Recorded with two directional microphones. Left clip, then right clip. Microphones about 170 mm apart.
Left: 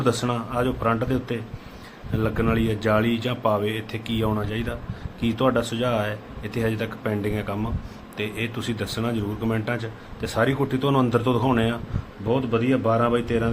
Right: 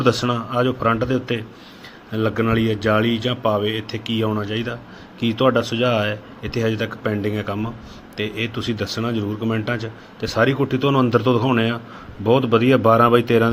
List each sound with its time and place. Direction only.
0.0 s speech: 10° right (ahead or behind)
12.2 s speech: 35° right (ahead or behind)